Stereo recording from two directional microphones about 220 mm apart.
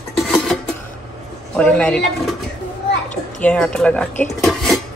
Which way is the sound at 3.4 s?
5° left (ahead or behind).